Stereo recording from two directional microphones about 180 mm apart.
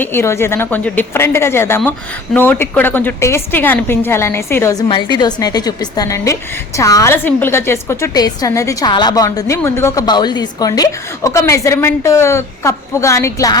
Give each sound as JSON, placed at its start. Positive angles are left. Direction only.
{"t": 0.0, "sound": "a woman's voice", "side_deg": 15}